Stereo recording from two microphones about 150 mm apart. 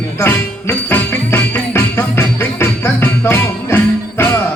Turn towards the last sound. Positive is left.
turn(degrees=15)  # may be behind; listen again after turning